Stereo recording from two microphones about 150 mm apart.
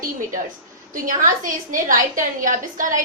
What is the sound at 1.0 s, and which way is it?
A woman's voice, 60° right (ahead or behind).